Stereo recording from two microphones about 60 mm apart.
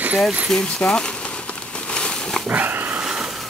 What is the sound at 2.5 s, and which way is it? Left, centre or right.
Dog, right.